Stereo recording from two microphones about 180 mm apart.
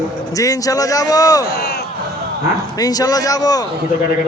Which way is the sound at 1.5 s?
65° left (ahead or behind).